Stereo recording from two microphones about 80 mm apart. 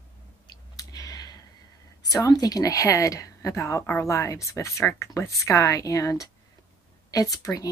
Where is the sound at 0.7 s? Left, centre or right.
Left.